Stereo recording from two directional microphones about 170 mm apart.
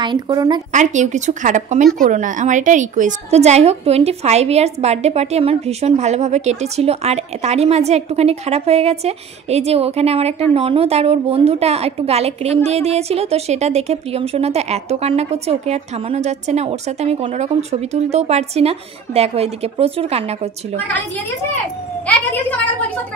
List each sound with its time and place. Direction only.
0.0 s speech: 25° right (ahead or behind)
0.7 s a woman's voice: 45° right (ahead or behind)
22.0 s a woman's voice: 10° left (ahead or behind)